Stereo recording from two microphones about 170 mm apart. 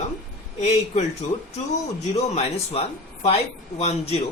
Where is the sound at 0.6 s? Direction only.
40° left (ahead or behind).